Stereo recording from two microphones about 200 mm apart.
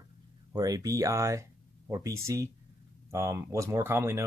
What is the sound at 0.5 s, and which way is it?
Speech, 20° right (ahead or behind).